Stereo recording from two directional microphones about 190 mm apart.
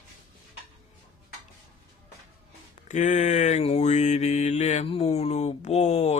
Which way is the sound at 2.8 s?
40° left (ahead or behind).